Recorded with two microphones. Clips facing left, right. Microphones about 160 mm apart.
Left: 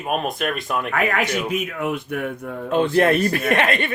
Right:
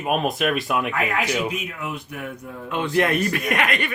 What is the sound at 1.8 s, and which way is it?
Speech, 55° left (ahead or behind).